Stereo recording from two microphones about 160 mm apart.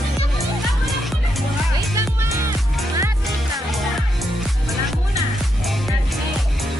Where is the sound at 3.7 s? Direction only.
Centre (ahead or behind).